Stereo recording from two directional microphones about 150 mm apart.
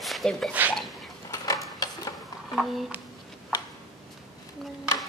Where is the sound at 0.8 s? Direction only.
Centre (ahead or behind).